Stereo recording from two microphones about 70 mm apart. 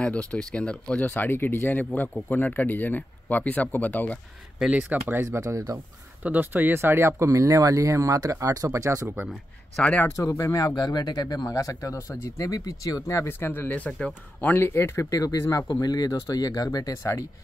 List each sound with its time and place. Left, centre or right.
0.0 s speech: centre
4.7 s speech: right
6.2 s speech: right
7.2 s speech: right
9.0 s speech: centre
10.1 s speech: left
10.8 s speech: left
13.3 s speech: left
14.7 s speech: left
15.7 s speech: left
16.9 s speech: left